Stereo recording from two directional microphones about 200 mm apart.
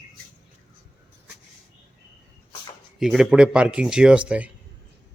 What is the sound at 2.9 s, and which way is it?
Speech, centre (ahead or behind).